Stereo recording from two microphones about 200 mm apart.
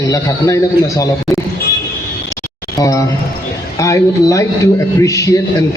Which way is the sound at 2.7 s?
15° left (ahead or behind).